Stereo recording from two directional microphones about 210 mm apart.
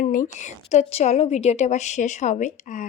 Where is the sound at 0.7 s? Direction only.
30° left (ahead or behind).